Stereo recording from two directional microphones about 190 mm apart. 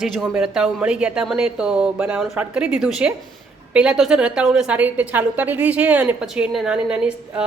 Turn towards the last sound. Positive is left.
turn(degrees=-5)  # may be behind; listen again after turning